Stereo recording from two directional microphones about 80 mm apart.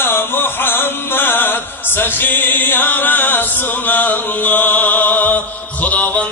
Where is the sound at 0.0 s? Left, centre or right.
Left.